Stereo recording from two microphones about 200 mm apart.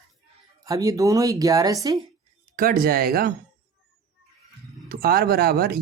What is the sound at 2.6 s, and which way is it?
Speech, 45° right (ahead or behind).